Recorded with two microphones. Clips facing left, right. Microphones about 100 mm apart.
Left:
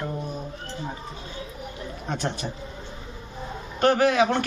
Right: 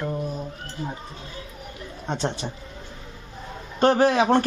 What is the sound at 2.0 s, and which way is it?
Speech, 25° right (ahead or behind).